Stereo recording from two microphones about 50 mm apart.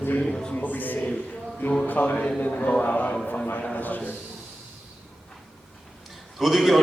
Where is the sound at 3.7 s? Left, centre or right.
Left.